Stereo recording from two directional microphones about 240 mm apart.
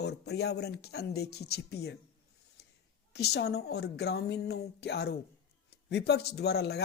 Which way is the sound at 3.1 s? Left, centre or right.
Left.